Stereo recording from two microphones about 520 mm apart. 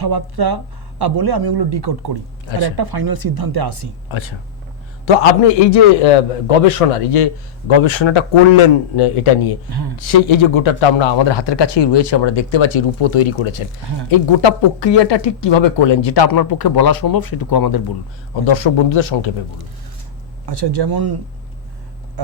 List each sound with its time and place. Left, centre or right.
0.0 s speech: right
4.1 s a man's voice: left
5.0 s a man's voice: left
7.7 s a man's voice: left
9.0 s speech: left
9.6 s speech: right
10.1 s a man's voice: left
18.4 s a man's voice: left
20.5 s speech: right